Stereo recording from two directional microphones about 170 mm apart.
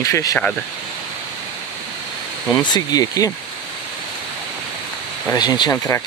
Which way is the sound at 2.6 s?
25° left (ahead or behind).